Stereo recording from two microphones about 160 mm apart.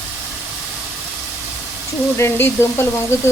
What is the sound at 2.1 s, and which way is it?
Frying, 15° left (ahead or behind).